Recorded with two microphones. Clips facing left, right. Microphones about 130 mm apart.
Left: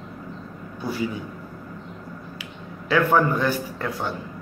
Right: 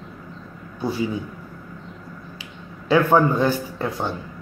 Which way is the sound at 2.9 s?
20° right (ahead or behind).